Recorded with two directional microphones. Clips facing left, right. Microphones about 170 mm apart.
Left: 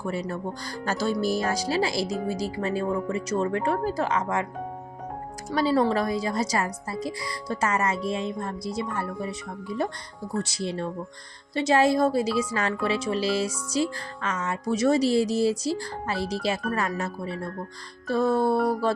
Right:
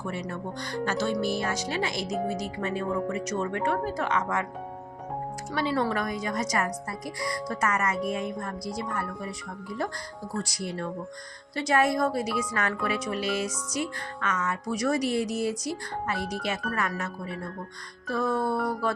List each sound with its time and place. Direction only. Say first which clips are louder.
0.0 s speech: left 4 dB; 35° left (ahead or behind)
5.5 s speech: left 5 dB; 35° left (ahead or behind)